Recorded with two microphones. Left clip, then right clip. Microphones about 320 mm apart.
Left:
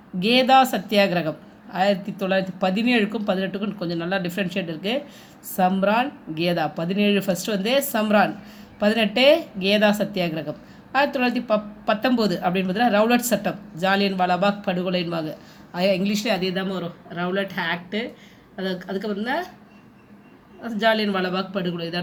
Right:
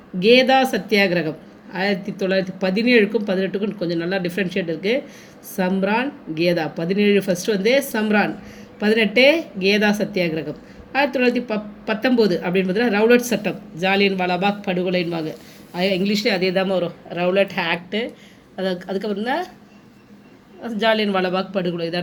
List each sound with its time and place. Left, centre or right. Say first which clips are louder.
0.2 s speech: right 2 dB; centre
18.7 s speech: right 2 dB; centre
20.6 s speech: right 2 dB; centre